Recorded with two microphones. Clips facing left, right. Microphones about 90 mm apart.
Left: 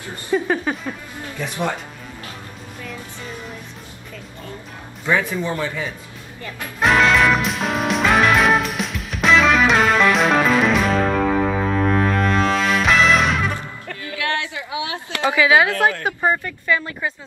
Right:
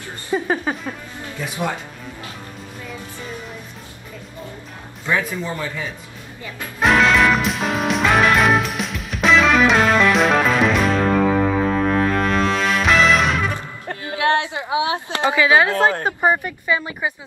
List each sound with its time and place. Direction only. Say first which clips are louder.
0.3 s a sound: left 1 dB; 15° right (ahead or behind)
1.4 s speech: left 1 dB; 5° right (ahead or behind)
5.0 s speech: left 2 dB; centre (ahead or behind)
6.4 s music: even; centre (ahead or behind)
13.8 s a sound: right 6 dB; 30° right (ahead or behind)
15.3 s a woman's voice: even; 15° left (ahead or behind)
15.7 s a woman's voice: right 1 dB; 20° right (ahead or behind)